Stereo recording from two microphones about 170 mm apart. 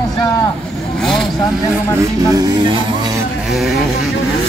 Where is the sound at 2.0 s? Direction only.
20° right (ahead or behind).